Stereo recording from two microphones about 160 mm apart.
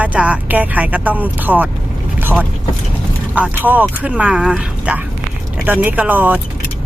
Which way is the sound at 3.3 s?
10° right (ahead or behind).